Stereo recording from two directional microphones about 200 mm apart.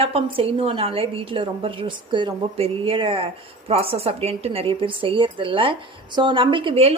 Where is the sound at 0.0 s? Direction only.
30° right (ahead or behind).